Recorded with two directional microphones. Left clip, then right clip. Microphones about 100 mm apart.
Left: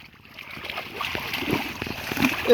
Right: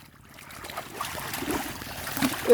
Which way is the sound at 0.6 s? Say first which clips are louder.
Left 4 dB; 20° right (ahead or behind).